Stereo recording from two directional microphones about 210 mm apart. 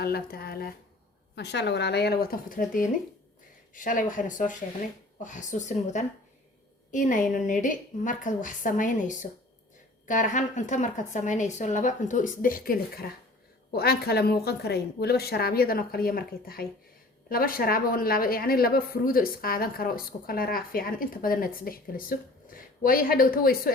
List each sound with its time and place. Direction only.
0.0 s a woman's voice: 50° left (ahead or behind)